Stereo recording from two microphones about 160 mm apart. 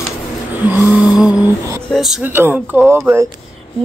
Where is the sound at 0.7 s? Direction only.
10° right (ahead or behind).